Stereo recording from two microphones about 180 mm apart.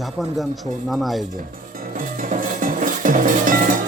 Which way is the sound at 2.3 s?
45° right (ahead or behind).